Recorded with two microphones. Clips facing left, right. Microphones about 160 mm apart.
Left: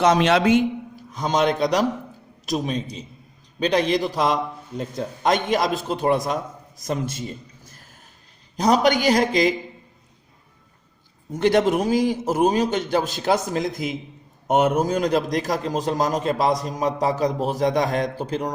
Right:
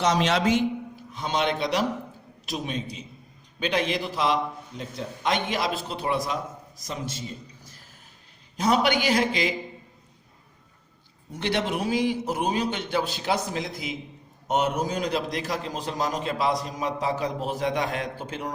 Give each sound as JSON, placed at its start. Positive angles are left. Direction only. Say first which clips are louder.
{"t": 0.0, "sound": "a man's voice", "louder": "left 5 dB", "side_deg": 55}
{"t": 1.1, "sound": "a man's voice", "louder": "left 5 dB", "side_deg": 40}
{"t": 8.5, "sound": "a man's voice", "louder": "left 4 dB", "side_deg": 40}
{"t": 11.3, "sound": "a man's voice", "louder": "left 9 dB", "side_deg": 45}